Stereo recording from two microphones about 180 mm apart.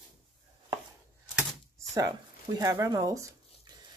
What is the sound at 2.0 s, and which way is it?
Speech, 20° right (ahead or behind).